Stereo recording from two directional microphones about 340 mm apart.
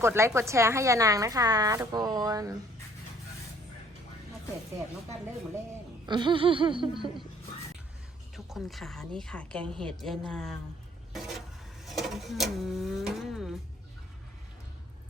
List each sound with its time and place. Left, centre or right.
0.0 s a woman's voice: centre
6.1 s a woman's voice: centre
8.4 s a woman's voice: centre
11.1 s vehicle: centre
11.9 s a sound: centre